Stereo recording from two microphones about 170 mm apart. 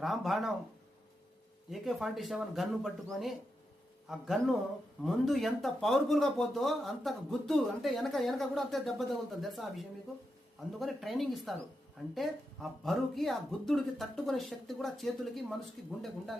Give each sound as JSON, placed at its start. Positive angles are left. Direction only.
{"t": 0.0, "sound": "speech", "side_deg": 0}
{"t": 1.7, "sound": "speech", "side_deg": 0}